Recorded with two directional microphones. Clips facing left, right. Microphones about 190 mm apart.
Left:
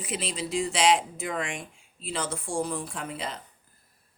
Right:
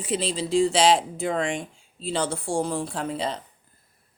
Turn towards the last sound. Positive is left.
turn(degrees=-30)  # may be behind; listen again after turning